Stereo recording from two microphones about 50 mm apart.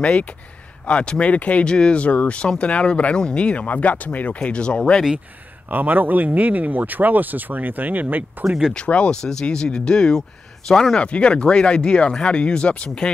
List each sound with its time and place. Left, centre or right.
0.0 s speech: left
5.7 s speech: right
8.5 s speech: centre
8.7 s speech: left